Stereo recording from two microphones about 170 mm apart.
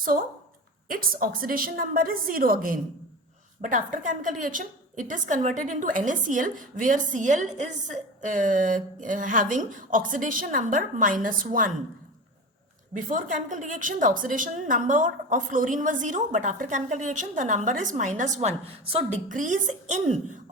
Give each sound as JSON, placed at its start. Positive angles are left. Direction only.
{"t": 0.9, "sound": "a woman's voice", "side_deg": -55}
{"t": 13.1, "sound": "a woman's voice", "side_deg": -50}
{"t": 19.3, "sound": "a woman's voice", "side_deg": -50}